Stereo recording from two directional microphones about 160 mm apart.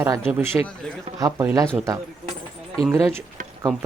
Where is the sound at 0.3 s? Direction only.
5° right (ahead or behind).